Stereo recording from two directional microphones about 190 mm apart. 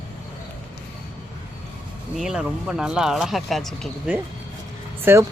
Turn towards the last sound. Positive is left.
turn(degrees=-15)  # may be behind; listen again after turning